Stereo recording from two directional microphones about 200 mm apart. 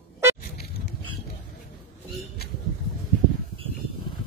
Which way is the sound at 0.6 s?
50° left (ahead or behind).